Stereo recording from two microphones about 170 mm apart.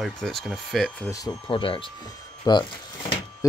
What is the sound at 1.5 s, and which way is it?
Speech, 30° left (ahead or behind).